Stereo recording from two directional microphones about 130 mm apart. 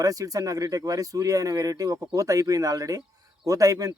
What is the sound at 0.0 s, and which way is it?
Speech, 30° right (ahead or behind).